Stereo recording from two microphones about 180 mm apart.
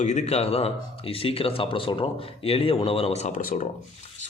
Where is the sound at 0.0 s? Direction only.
40° left (ahead or behind).